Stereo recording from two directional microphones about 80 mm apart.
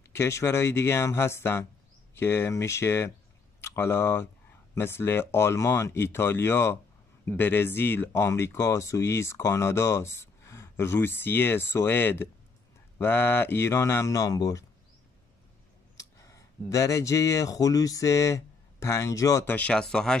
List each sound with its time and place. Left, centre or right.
0.1 s speech: left
16.0 s speech: left
19.4 s speech: centre